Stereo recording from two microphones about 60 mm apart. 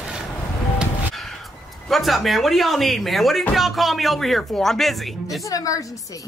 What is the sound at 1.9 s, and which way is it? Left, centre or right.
Speech, centre.